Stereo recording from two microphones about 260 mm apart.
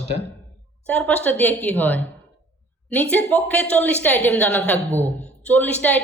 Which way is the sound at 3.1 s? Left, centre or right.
Centre.